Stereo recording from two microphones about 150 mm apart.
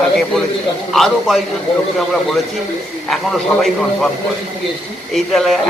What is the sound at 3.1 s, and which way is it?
Speech, 5° left (ahead or behind).